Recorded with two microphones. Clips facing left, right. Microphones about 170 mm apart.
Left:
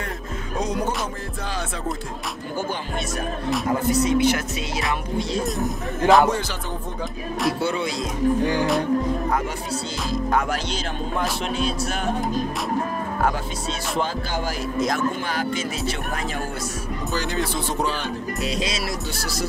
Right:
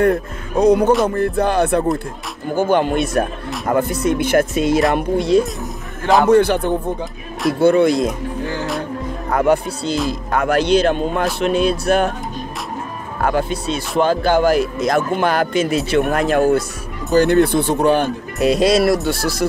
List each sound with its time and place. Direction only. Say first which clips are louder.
0.0 s speech: right 15 dB; 60° right (ahead or behind)
3.6 s music: right 5 dB; 55° right (ahead or behind)
4.9 s speech: right 11 dB; 60° right (ahead or behind)
5.4 s a man's voice: right 2 dB; centre (ahead or behind)
6.2 s speech: right 11 dB; 60° right (ahead or behind)
9.3 s speech: right 9 dB; 60° right (ahead or behind)
13.2 s speech: right 8 dB; 60° right (ahead or behind)